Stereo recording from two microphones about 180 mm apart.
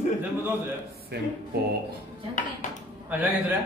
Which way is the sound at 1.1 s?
65° right (ahead or behind).